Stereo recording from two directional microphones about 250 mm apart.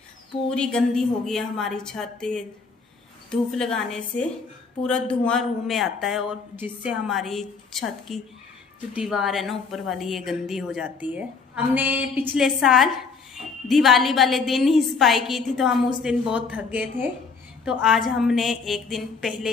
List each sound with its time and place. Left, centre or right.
0.5 s a woman's voice: centre